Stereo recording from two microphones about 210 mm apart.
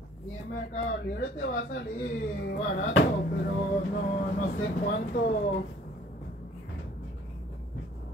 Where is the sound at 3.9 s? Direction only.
40° left (ahead or behind).